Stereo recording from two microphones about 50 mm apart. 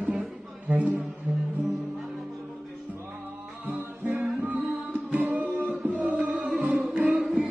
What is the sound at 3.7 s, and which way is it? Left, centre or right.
Music, right.